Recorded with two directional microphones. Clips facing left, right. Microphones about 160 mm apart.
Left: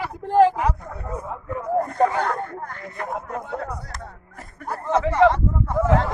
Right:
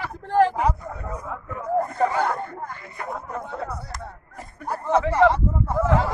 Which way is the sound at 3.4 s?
15° left (ahead or behind).